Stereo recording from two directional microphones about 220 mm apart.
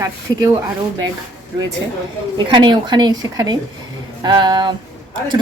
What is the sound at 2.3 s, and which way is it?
A woman's voice, 20° right (ahead or behind).